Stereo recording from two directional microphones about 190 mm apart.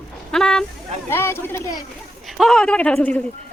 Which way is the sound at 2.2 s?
Centre (ahead or behind).